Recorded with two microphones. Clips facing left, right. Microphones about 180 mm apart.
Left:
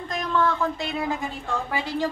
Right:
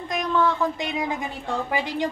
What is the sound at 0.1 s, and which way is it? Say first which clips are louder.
A woman's voice: right 1 dB; 15° right (ahead or behind).